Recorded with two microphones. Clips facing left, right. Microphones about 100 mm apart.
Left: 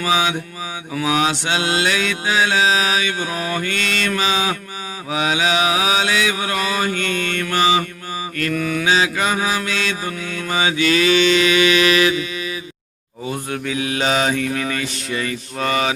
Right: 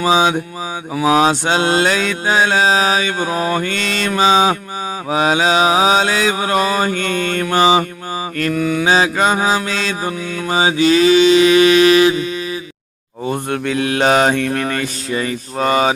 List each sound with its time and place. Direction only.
0.0 s mantra: 30° right (ahead or behind)
7.4 s mantra: 25° right (ahead or behind)
8.8 s mantra: 35° right (ahead or behind)
13.2 s mantra: 55° right (ahead or behind)
15.1 s mantra: 30° right (ahead or behind)